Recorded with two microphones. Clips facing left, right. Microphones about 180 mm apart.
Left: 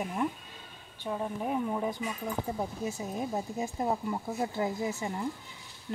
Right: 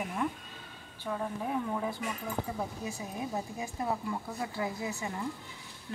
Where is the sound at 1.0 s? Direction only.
15° left (ahead or behind).